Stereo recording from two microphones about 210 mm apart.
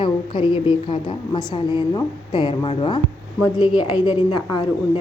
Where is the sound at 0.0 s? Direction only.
25° left (ahead or behind).